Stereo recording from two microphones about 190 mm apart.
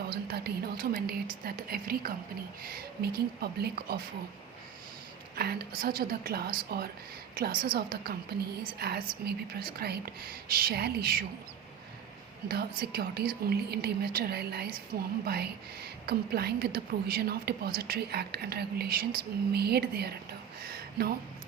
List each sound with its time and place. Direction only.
0.1 s a woman's voice: 55° right (ahead or behind)
5.4 s a woman's voice: 55° right (ahead or behind)
12.5 s a woman's voice: 55° right (ahead or behind)
20.6 s a sound: 55° right (ahead or behind)